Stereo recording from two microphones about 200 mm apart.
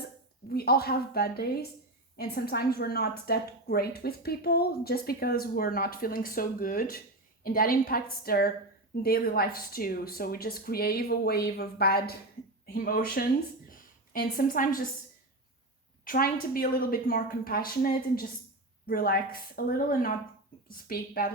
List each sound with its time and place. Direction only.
0.4 s a woman's voice: 50° left (ahead or behind)
13.7 s a sound: 45° left (ahead or behind)
16.0 s a woman's voice: 45° left (ahead or behind)